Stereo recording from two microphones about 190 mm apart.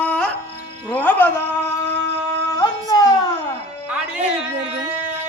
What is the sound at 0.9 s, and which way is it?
Music, 10° left (ahead or behind).